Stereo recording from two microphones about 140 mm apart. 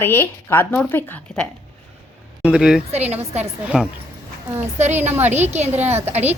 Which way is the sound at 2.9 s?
50° right (ahead or behind).